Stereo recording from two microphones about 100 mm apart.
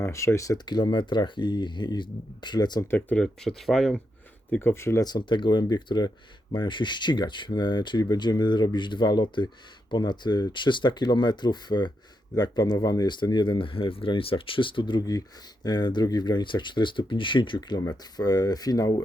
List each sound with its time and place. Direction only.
0.0 s speech: 30° left (ahead or behind)
0.6 s speech: 45° left (ahead or behind)
2.8 s speech: 25° left (ahead or behind)
3.2 s speech: 5° left (ahead or behind)
4.6 s speech: 25° left (ahead or behind)
5.0 s speech: 50° left (ahead or behind)
17.7 s speech: 40° left (ahead or behind)